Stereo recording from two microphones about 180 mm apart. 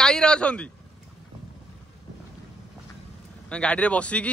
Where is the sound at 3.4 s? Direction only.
5° left (ahead or behind).